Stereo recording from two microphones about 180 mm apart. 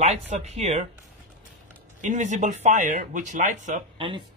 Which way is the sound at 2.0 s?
40° right (ahead or behind).